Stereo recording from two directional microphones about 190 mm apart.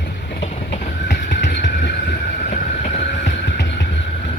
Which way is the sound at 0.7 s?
65° left (ahead or behind).